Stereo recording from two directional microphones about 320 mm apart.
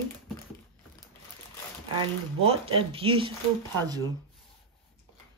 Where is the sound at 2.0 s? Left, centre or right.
Centre.